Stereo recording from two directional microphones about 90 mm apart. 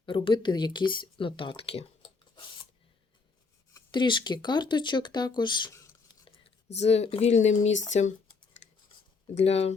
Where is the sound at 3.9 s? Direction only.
60° left (ahead or behind).